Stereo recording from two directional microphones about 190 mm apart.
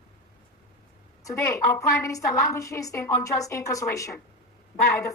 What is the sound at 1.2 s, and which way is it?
A woman's voice, 15° left (ahead or behind).